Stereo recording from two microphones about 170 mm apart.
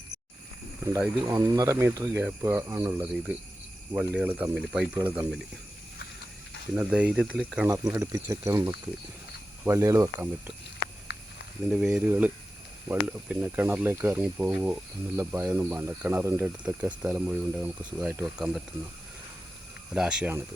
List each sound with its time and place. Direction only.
0.8 s speech: 20° right (ahead or behind)
6.7 s speech: 5° right (ahead or behind)
7.7 s speech: 20° right (ahead or behind)
11.1 s a sound: 75° left (ahead or behind)
11.7 s speech: 5° right (ahead or behind)
19.9 s speech: 5° right (ahead or behind)